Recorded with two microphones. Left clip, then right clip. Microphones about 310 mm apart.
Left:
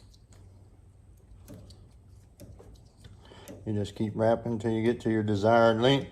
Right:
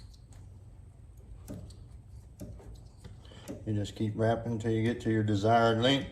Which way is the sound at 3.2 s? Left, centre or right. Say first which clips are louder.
Even; left.